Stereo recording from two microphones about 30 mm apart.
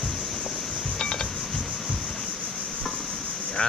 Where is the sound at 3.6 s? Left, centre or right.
Left.